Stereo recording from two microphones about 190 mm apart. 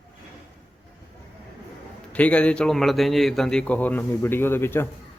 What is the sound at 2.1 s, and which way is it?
A man's voice, 5° left (ahead or behind).